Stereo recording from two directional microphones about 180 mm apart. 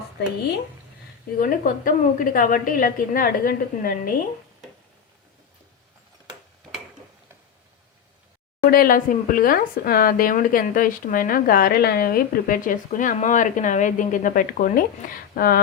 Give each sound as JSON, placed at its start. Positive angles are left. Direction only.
{"t": 1.4, "sound": "speech", "side_deg": 50}
{"t": 8.7, "sound": "speech", "side_deg": 50}